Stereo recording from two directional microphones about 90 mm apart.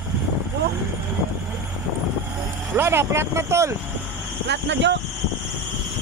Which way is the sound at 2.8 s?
30° right (ahead or behind).